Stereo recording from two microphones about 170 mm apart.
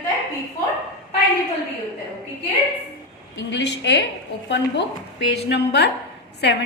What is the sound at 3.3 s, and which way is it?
A woman's voice, 90° left.